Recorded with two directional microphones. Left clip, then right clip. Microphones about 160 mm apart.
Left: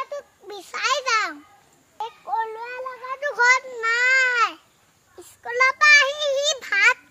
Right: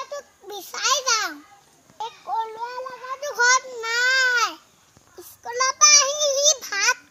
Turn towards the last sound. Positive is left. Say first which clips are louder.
# even
turn(degrees=30)  # may be behind; listen again after turning